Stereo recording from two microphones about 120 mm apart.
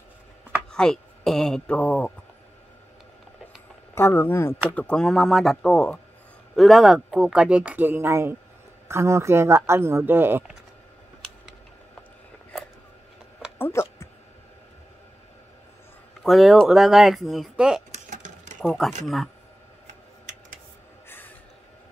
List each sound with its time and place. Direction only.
0.7 s speech: 5° left (ahead or behind)
3.9 s speech: 20° left (ahead or behind)
4.7 s speech: 10° left (ahead or behind); by 10.4 s 20° right (ahead or behind)
13.6 s a sound: 20° left (ahead or behind)
16.2 s speech: centre (ahead or behind)
17.9 s sewing machine: 90° right
18.7 s speech: centre (ahead or behind)